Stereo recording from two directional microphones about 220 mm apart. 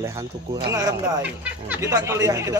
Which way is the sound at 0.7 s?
15° right (ahead or behind).